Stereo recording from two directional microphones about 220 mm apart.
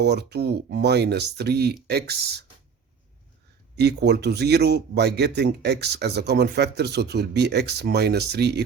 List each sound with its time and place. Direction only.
0.0 s speech: 50° right (ahead or behind)
3.8 s speech: 50° right (ahead or behind)